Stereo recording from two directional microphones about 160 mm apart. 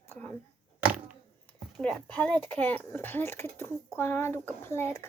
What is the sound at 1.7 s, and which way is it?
Speech, 5° left (ahead or behind).